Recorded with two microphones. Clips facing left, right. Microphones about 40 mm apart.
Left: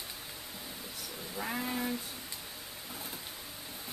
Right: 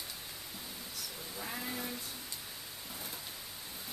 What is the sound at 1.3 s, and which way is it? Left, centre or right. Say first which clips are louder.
Speech: left 6 dB; centre.